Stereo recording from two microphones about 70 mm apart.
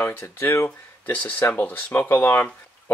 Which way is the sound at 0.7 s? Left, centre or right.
Left.